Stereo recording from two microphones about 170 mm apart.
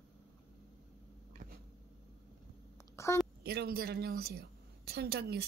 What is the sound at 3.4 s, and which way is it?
A woman's voice, 65° right (ahead or behind).